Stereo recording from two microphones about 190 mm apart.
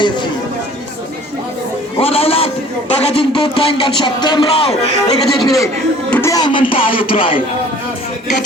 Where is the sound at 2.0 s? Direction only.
30° left (ahead or behind).